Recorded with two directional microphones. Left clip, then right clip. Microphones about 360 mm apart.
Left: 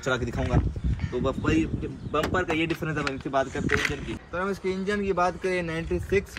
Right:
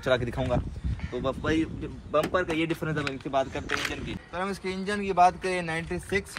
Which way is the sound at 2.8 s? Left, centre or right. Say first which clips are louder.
Left 2 dB; centre.